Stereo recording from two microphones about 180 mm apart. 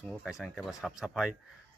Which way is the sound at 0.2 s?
Centre (ahead or behind).